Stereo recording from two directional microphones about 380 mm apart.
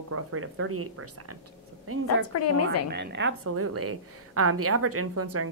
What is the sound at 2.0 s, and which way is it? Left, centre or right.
Speech, left.